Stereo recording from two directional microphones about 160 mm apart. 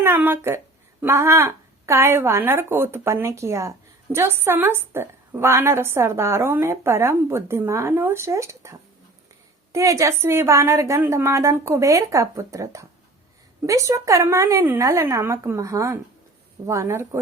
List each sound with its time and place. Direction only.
0.0 s a woman's voice: 15° right (ahead or behind)